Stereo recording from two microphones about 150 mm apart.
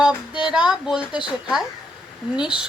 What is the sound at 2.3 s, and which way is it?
Speech, 5° right (ahead or behind).